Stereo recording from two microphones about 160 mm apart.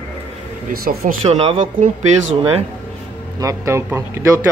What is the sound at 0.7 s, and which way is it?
Speech, 65° right (ahead or behind).